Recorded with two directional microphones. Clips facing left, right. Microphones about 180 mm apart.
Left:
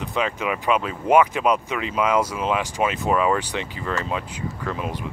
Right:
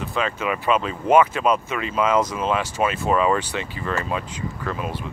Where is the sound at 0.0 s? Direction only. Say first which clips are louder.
Even; 15° left (ahead or behind).